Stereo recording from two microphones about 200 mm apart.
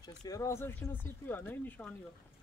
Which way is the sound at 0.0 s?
20° left (ahead or behind).